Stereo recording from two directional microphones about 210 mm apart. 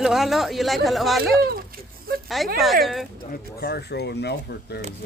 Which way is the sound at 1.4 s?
45° right (ahead or behind).